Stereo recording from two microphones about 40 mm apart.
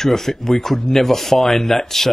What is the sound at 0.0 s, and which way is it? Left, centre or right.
Speech, centre.